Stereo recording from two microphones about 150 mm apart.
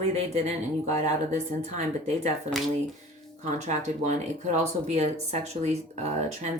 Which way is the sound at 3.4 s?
50° right (ahead or behind).